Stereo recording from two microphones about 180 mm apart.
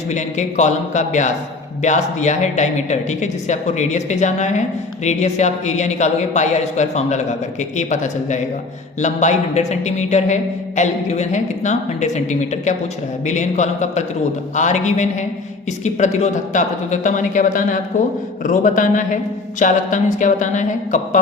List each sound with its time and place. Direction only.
0.1 s a woman's voice: 40° left (ahead or behind)